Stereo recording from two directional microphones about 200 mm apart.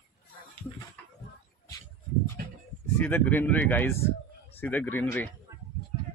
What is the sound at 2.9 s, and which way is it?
Speech, 10° left (ahead or behind).